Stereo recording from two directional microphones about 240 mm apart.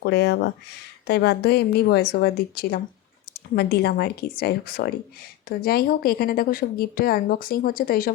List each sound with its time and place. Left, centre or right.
0.0 s a woman's voice: left